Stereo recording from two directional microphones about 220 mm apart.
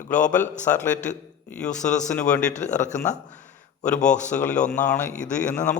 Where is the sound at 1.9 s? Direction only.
5° left (ahead or behind).